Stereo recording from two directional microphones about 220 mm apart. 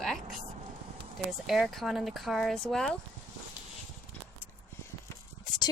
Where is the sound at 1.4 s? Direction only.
Centre (ahead or behind).